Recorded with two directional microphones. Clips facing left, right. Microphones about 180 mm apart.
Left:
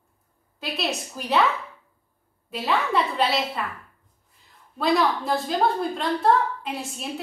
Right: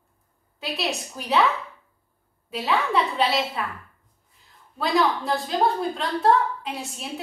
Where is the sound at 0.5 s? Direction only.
Centre (ahead or behind).